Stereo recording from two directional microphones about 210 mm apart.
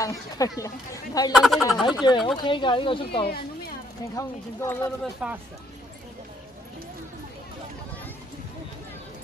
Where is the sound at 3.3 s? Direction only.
50° left (ahead or behind).